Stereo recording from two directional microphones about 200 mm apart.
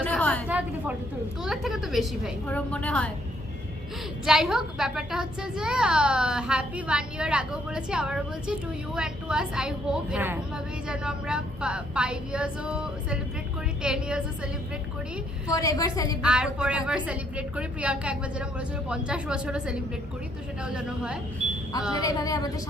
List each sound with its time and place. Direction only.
0.0 s a sound: 5° left (ahead or behind)
0.4 s a woman's voice: 10° right (ahead or behind)
4.3 s a woman's voice: 5° right (ahead or behind)
15.5 s a woman's voice: 15° left (ahead or behind)
16.2 s a woman's voice: 5° right (ahead or behind)
21.9 s a woman's voice: 15° left (ahead or behind)